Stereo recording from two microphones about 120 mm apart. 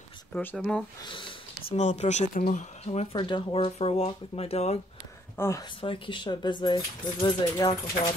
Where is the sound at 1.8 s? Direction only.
75° left (ahead or behind).